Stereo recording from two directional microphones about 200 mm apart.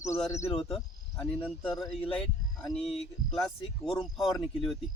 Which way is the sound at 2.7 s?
Centre (ahead or behind).